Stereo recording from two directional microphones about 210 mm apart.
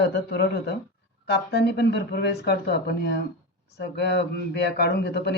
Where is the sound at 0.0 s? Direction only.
50° left (ahead or behind).